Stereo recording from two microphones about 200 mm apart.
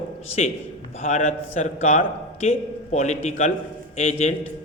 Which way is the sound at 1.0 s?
35° left (ahead or behind).